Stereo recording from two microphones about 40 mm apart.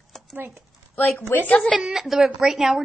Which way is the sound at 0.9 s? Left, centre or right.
Left.